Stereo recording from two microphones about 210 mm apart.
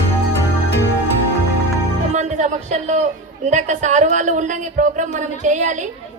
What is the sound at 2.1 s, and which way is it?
Music, 35° right (ahead or behind).